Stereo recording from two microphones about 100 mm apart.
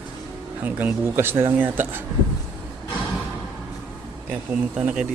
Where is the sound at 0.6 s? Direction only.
15° right (ahead or behind).